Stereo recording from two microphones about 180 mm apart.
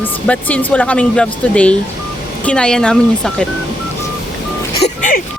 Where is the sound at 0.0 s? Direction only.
10° left (ahead or behind).